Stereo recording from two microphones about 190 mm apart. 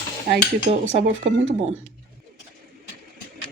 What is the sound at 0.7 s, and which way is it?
Speech, 35° right (ahead or behind).